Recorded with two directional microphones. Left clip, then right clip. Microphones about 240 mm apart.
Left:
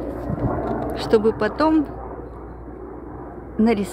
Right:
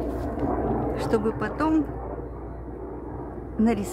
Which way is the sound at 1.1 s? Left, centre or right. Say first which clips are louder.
Left 10 dB; left.